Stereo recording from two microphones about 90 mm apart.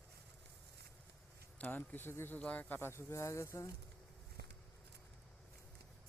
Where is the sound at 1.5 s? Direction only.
20° left (ahead or behind); by 3.7 s 35° left (ahead or behind).